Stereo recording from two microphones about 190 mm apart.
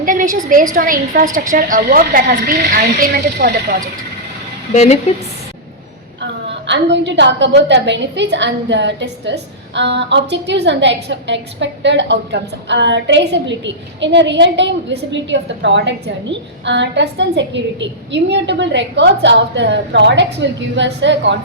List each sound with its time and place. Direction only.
0.0 s a sound: 45° right (ahead or behind)
0.7 s a woman's voice: 45° right (ahead or behind)
4.7 s a woman's voice: 35° left (ahead or behind)
6.7 s a woman's voice: 70° right (ahead or behind)